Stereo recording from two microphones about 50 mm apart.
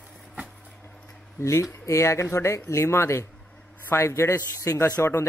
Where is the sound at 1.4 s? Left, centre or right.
Left.